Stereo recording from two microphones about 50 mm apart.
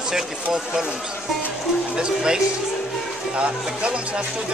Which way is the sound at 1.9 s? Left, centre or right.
Centre.